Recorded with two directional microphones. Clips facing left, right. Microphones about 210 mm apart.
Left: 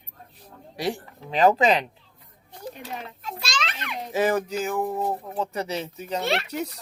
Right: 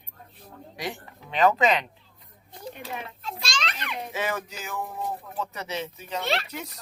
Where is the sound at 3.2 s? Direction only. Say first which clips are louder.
Left 3 dB; 5° left (ahead or behind).